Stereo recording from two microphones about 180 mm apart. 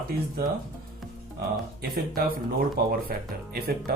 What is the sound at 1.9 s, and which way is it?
Speech, 55° right (ahead or behind).